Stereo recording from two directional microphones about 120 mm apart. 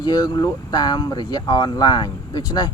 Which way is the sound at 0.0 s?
35° left (ahead or behind).